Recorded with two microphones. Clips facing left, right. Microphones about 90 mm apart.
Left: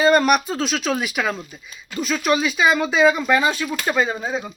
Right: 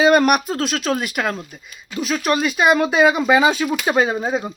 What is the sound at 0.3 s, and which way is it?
Speech, 5° right (ahead or behind).